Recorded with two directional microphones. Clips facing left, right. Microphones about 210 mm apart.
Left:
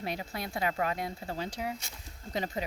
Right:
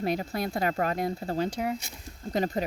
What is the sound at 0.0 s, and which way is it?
Speech, 45° right (ahead or behind).